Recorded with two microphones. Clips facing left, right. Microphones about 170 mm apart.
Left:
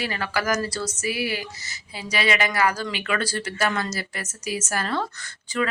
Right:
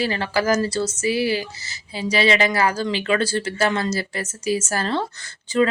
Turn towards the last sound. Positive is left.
turn(degrees=-25)  # may be behind; listen again after turning